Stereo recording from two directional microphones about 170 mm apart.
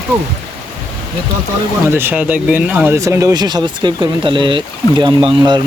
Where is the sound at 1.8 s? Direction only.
15° right (ahead or behind).